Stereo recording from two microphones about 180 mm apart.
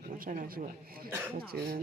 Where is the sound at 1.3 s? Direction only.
55° right (ahead or behind).